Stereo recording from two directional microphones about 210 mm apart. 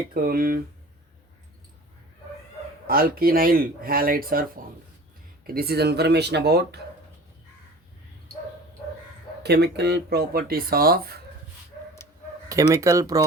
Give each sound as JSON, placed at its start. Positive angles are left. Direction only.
{"t": 0.1, "sound": "speech", "side_deg": -45}
{"t": 2.8, "sound": "speech", "side_deg": -45}
{"t": 9.4, "sound": "speech", "side_deg": -50}
{"t": 12.5, "sound": "speech", "side_deg": -15}